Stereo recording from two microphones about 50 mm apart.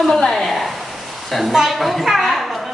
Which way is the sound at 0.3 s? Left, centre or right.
Centre.